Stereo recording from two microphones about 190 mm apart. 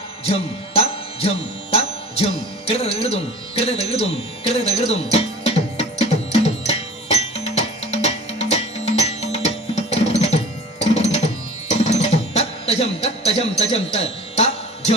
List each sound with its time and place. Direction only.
0.3 s music: 30° left (ahead or behind)
4.4 s tabla: 30° left (ahead or behind)
9.9 s music: 35° left (ahead or behind)